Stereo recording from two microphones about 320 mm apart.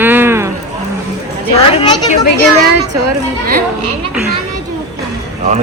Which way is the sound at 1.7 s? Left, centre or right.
Centre.